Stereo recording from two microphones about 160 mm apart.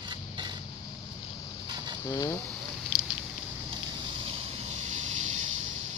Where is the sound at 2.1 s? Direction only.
20° left (ahead or behind).